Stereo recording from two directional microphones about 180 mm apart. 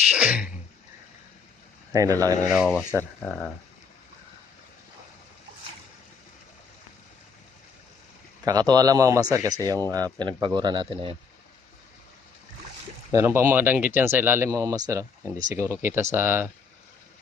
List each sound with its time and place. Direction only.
0.1 s a sound: 5° right (ahead or behind)
1.9 s speech: 20° right (ahead or behind)
2.5 s speech: 5° right (ahead or behind)
8.4 s speech: 20° right (ahead or behind)
13.1 s speech: 15° right (ahead or behind)